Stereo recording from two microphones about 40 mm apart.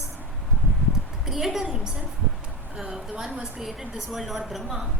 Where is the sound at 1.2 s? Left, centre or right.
Centre.